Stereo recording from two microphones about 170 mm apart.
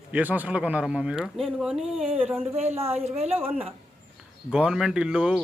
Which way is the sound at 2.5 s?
40° right (ahead or behind).